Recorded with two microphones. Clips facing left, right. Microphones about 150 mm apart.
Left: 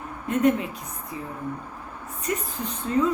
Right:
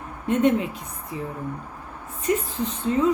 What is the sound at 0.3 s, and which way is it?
Speech, 25° right (ahead or behind).